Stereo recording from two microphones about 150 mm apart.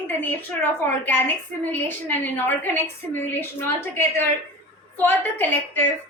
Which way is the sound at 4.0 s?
15° left (ahead or behind).